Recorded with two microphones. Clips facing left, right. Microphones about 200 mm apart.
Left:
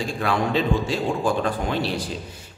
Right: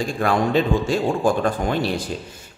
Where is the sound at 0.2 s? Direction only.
50° right (ahead or behind).